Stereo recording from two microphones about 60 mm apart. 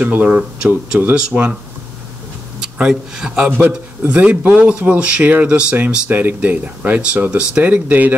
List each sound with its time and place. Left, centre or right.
0.0 s speech: right
2.8 s a man's voice: centre
7.0 s speech: centre